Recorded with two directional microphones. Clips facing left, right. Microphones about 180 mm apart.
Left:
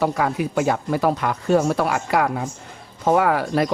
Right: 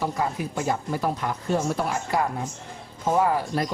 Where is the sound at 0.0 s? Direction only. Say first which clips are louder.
Left 6 dB; 70° left (ahead or behind).